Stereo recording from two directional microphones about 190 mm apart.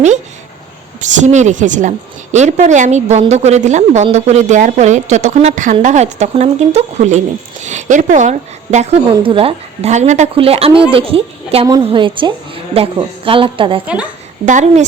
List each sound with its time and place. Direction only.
1.0 s a woman's voice: 40° right (ahead or behind)
13.8 s a woman's voice: 5° right (ahead or behind)
14.4 s a woman's voice: 40° right (ahead or behind)